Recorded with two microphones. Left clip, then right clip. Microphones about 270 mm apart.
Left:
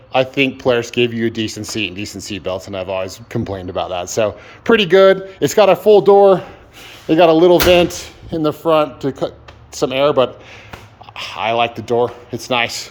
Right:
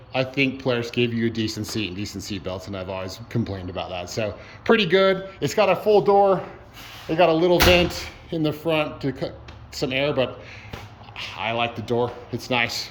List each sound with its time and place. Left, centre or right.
0.1 s speech: centre